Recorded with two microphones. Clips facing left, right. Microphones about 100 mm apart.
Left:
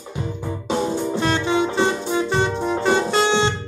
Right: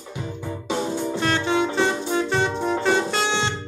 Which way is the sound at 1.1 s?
20° left (ahead or behind).